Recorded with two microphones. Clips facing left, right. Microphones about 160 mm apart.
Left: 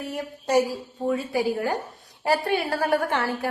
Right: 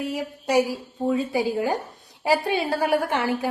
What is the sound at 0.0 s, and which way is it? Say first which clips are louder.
Speech: right 3 dB; 10° right (ahead or behind).